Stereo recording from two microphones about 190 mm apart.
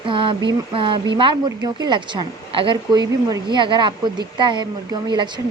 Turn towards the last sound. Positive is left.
turn(degrees=-25)  # may be behind; listen again after turning